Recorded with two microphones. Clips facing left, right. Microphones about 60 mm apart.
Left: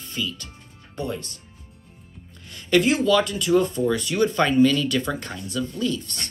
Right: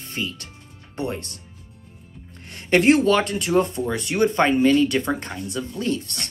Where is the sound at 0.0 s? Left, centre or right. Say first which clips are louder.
Even; right.